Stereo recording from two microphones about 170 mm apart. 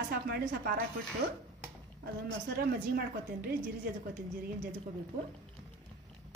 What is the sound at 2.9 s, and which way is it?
Speech, 65° right (ahead or behind).